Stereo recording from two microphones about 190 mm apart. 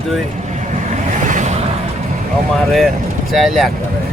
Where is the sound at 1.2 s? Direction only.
40° right (ahead or behind).